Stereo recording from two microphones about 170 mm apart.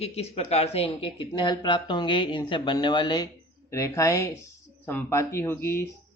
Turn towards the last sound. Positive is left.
turn(degrees=15)  # may be behind; listen again after turning